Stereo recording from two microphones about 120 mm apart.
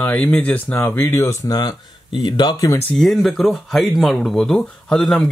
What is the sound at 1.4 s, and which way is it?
Speech, 30° left (ahead or behind).